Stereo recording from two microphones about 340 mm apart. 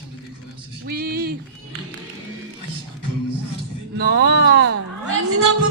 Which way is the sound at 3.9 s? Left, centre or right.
Right.